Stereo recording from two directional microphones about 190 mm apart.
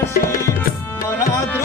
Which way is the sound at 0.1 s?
50° left (ahead or behind).